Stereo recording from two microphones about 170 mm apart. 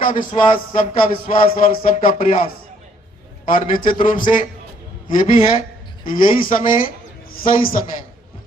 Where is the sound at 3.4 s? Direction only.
55° left (ahead or behind).